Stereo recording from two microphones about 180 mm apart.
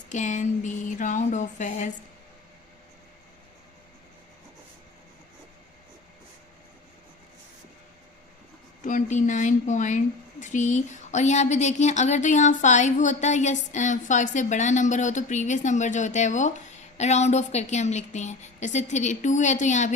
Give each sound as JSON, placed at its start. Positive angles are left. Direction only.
{"t": 0.1, "sound": "speech", "side_deg": 40}
{"t": 8.8, "sound": "speech", "side_deg": 45}